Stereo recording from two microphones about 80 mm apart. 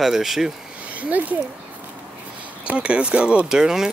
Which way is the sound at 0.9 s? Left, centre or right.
Centre.